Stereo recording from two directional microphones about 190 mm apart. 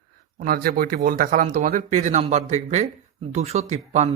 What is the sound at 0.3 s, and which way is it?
Speech, 50° right (ahead or behind).